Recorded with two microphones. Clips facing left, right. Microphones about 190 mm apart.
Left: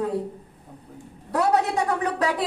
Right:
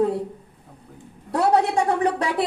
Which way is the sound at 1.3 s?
30° right (ahead or behind).